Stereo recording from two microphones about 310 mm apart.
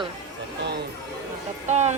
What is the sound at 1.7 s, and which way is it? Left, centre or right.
Speech, right.